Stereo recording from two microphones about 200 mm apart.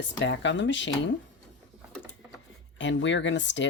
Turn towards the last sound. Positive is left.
turn(degrees=65)  # may be behind; listen again after turning